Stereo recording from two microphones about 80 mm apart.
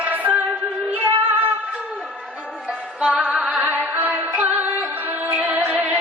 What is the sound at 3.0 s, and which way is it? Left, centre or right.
Music, centre.